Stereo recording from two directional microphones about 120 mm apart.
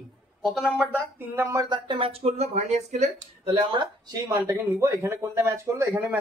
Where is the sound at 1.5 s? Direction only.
35° right (ahead or behind); by 3.6 s 70° right (ahead or behind).